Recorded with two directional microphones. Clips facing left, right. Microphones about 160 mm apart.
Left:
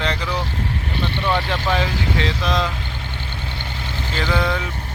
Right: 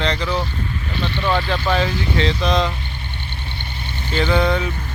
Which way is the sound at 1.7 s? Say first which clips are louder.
Right 2 dB; 10° left (ahead or behind).